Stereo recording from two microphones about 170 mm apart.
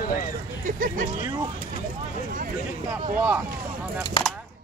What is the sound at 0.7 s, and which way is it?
Speech, 55° right (ahead or behind).